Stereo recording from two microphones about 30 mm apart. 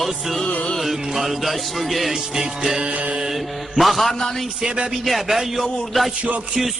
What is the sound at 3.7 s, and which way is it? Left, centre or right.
Music, centre.